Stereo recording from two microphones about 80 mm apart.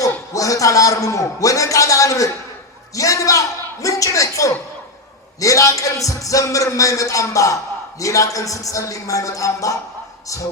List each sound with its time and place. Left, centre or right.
0.0 s a man's voice: left
2.9 s a sound: left
5.4 s a man's voice: left